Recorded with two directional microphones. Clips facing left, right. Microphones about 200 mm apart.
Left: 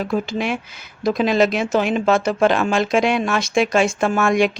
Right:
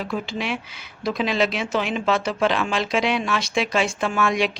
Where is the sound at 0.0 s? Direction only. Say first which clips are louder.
Left 5 dB; 45° left (ahead or behind).